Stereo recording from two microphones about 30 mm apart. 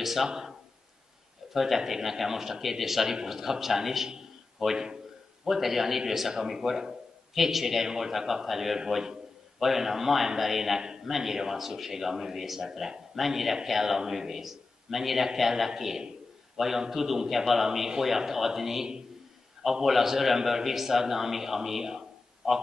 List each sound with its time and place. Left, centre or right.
0.0 s a man's voice: centre
10.8 s a man's voice: right
11.1 s a man's voice: centre